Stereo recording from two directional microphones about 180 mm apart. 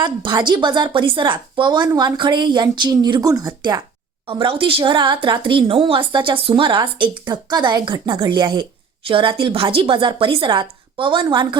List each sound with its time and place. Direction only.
0.0 s a woman's voice: 25° right (ahead or behind)